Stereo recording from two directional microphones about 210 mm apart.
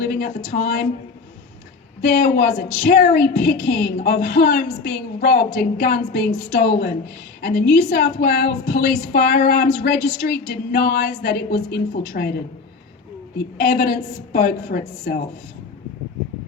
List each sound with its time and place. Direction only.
0.0 s a woman's voice: 45° left (ahead or behind)
2.0 s a woman's voice: 45° left (ahead or behind)
13.6 s a woman's voice: 50° left (ahead or behind)